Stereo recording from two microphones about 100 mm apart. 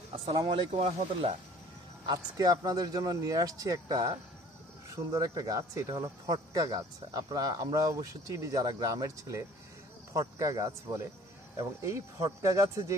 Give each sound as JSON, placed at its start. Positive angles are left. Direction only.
{"t": 0.4, "sound": "speech", "side_deg": -80}
{"t": 2.0, "sound": "speech", "side_deg": -40}